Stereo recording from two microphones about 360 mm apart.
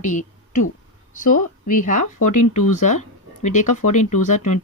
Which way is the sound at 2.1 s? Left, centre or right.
Left.